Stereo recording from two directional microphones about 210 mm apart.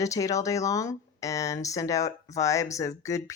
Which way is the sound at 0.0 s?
15° left (ahead or behind).